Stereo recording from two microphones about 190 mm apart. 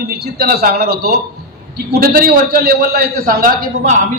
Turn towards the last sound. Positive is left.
turn(degrees=-40)  # may be behind; listen again after turning